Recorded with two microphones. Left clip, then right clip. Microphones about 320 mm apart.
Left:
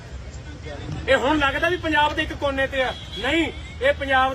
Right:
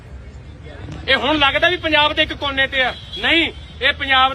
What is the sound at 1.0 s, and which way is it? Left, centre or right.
A man's voice, centre.